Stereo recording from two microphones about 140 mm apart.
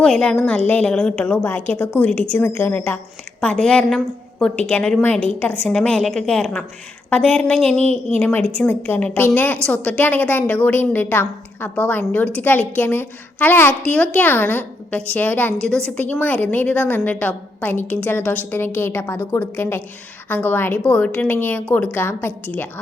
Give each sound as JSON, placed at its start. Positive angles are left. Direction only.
{"t": 0.0, "sound": "a woman's voice", "side_deg": 5}
{"t": 3.4, "sound": "a woman's voice", "side_deg": 5}